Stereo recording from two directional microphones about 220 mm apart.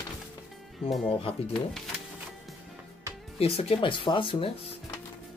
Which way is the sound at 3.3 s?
25° left (ahead or behind).